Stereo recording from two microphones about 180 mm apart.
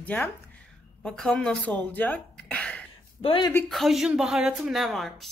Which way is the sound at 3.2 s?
30° left (ahead or behind).